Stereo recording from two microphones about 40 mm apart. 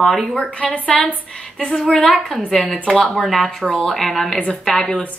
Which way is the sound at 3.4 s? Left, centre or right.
Centre.